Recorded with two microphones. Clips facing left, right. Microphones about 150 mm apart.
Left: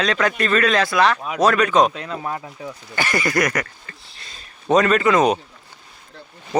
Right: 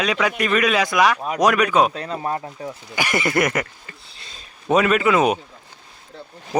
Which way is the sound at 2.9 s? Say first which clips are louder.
Even; 20° right (ahead or behind).